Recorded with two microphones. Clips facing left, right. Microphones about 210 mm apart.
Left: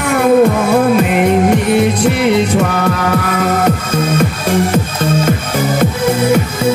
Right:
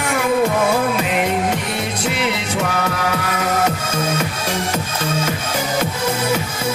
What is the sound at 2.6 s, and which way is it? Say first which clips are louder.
Music: left 6 dB; 55° left (ahead or behind).